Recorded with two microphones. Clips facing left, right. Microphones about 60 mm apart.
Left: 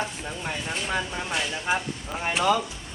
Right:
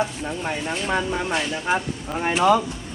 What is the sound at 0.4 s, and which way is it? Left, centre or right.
Speech, right.